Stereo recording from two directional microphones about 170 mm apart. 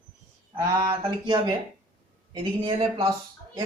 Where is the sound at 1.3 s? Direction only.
25° right (ahead or behind).